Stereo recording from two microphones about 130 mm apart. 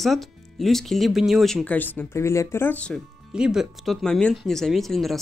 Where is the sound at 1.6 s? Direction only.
15° left (ahead or behind).